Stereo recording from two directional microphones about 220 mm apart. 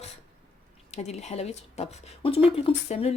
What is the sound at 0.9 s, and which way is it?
Speech, 30° left (ahead or behind).